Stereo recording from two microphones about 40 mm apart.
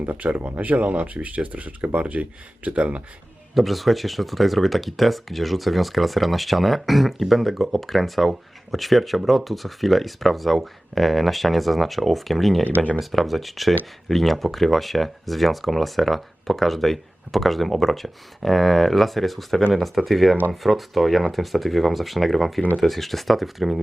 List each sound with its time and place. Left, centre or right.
0.0 s speech: right
3.5 s speech: centre